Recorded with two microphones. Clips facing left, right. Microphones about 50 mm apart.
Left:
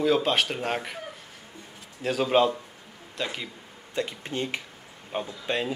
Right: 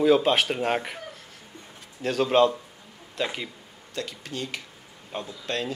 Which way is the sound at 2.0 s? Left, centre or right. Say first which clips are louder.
Right 2 dB; centre.